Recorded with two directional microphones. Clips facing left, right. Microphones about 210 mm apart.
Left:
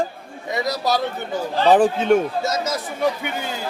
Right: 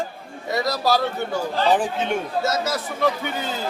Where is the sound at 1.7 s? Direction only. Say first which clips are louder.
Left 8 dB; 40° left (ahead or behind).